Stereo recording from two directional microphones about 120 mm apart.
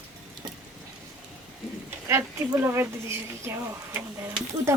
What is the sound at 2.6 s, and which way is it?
Speech, 20° right (ahead or behind).